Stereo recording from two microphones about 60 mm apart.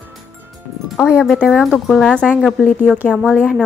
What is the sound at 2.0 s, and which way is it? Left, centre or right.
Speech, centre.